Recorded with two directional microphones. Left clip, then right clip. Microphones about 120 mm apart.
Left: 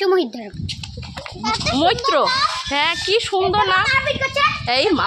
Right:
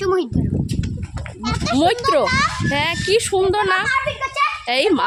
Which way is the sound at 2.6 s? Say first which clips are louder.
Even; 40° right (ahead or behind).